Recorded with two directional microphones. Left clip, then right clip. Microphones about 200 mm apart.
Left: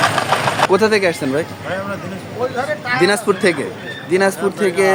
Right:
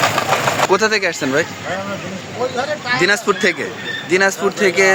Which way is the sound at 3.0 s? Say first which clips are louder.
Even; 5° left (ahead or behind).